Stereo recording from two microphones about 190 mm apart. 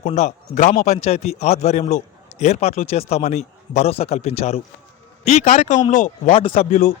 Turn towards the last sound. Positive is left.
turn(degrees=40)  # may be behind; listen again after turning